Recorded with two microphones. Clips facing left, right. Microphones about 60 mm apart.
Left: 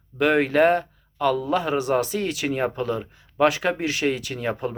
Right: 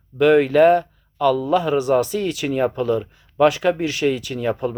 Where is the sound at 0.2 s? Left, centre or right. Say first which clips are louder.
Right 5 dB; left.